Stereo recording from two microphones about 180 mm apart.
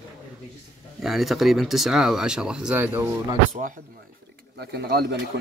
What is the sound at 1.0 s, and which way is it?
Speech, centre (ahead or behind).